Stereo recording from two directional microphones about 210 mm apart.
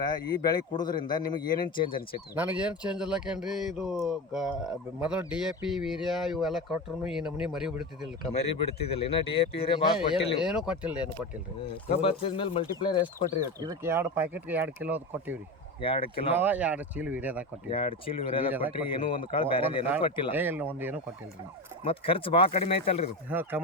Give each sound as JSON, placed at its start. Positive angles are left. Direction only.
{"t": 0.0, "sound": "a man's voice", "side_deg": 20}
{"t": 2.3, "sound": "speech", "side_deg": -10}
{"t": 8.4, "sound": "a man's voice", "side_deg": 30}
{"t": 10.7, "sound": "speech", "side_deg": -5}
{"t": 11.9, "sound": "a man's voice", "side_deg": 25}
{"t": 13.4, "sound": "speech", "side_deg": -15}
{"t": 15.8, "sound": "a man's voice", "side_deg": 25}
{"t": 16.3, "sound": "speech", "side_deg": -10}
{"t": 17.7, "sound": "a man's voice", "side_deg": 25}
{"t": 20.3, "sound": "speech", "side_deg": -10}
{"t": 21.8, "sound": "a man's voice", "side_deg": 25}
{"t": 23.3, "sound": "speech", "side_deg": -10}